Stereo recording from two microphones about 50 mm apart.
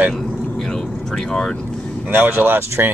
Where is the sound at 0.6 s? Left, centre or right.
Centre.